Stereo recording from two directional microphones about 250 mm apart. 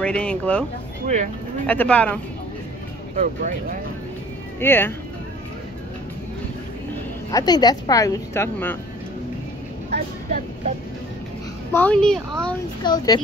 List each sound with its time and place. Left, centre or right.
0.0 s a woman's voice: centre
1.0 s speech: right
1.7 s a woman's voice: centre
3.2 s speech: right
4.6 s a woman's voice: centre
7.2 s a woman's voice: centre
11.7 s a woman's voice: centre
12.8 s a woman's voice: centre